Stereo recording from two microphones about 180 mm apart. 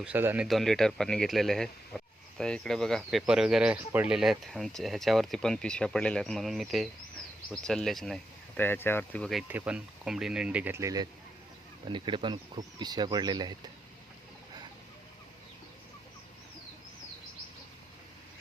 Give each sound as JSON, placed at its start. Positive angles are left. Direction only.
{"t": 0.0, "sound": "speech", "side_deg": -10}
{"t": 0.4, "sound": "speech", "side_deg": 0}
{"t": 9.5, "sound": "speech", "side_deg": -10}